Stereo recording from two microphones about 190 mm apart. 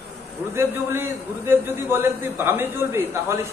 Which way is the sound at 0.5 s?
10° right (ahead or behind).